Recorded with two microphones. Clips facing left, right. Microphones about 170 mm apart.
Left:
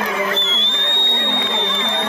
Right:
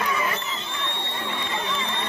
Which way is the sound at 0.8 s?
70° left (ahead or behind).